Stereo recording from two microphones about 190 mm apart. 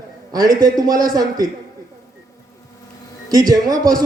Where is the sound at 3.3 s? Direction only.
20° right (ahead or behind).